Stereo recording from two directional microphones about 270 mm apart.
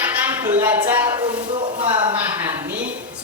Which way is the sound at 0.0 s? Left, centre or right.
Centre.